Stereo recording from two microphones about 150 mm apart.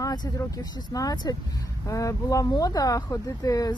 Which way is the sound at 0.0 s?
25° left (ahead or behind).